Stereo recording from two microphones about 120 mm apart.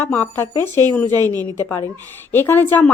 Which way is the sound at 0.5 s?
35° right (ahead or behind).